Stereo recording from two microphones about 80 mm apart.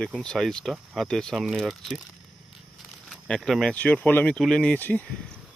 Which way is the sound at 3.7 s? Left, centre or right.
Centre.